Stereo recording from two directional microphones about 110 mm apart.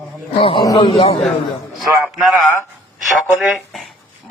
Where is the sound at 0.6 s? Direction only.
40° left (ahead or behind).